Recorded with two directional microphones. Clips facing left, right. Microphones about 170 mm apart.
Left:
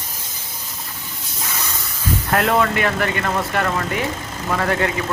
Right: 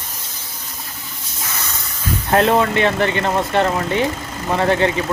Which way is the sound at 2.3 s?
25° right (ahead or behind).